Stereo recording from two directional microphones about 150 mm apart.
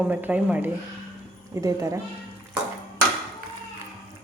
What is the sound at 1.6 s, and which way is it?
Speech, 20° right (ahead or behind).